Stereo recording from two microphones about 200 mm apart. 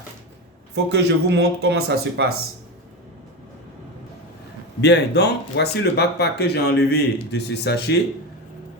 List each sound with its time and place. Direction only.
0.9 s speech: 55° right (ahead or behind)
4.8 s speech: 55° left (ahead or behind)